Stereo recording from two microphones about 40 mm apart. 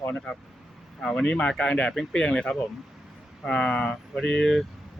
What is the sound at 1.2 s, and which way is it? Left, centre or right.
Speech, left.